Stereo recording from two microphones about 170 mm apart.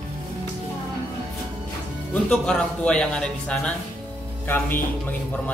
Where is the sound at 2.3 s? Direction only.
5° left (ahead or behind).